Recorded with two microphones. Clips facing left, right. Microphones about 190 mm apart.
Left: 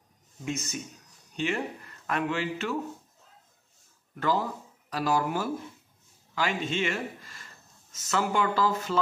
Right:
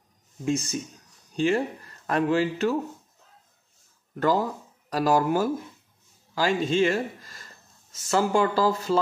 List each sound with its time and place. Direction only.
0.5 s speech: 30° right (ahead or behind)
4.1 s speech: 40° right (ahead or behind)